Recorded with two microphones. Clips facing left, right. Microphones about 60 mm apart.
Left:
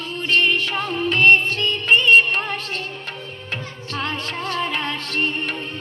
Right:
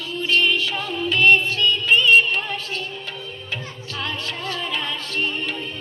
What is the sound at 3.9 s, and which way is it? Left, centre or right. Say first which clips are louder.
Music: left 3 dB; left.